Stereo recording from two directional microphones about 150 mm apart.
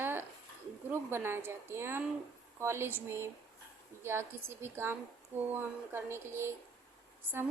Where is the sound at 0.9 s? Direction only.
15° right (ahead or behind).